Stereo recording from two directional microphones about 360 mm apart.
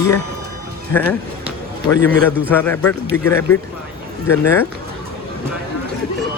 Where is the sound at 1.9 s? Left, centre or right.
Right.